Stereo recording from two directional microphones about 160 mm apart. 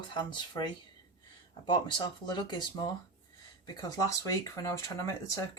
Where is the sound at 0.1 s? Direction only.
25° left (ahead or behind).